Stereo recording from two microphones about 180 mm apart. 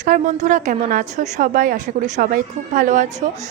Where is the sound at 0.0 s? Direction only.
40° right (ahead or behind).